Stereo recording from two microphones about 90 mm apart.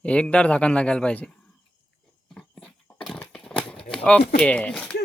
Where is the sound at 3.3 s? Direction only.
10° left (ahead or behind).